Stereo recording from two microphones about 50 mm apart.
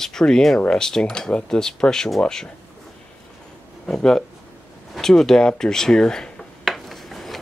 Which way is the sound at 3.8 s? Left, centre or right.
Centre.